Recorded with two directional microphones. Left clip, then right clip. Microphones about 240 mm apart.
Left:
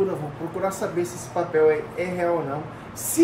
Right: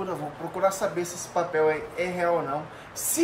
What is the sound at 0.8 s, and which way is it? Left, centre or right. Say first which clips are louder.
Speech: left 2 dB; centre.